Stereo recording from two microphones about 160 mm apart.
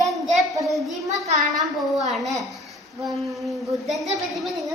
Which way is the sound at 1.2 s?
45° right (ahead or behind).